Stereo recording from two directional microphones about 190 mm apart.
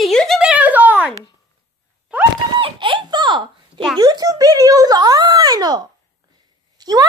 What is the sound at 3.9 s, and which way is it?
A child's voice, 20° right (ahead or behind).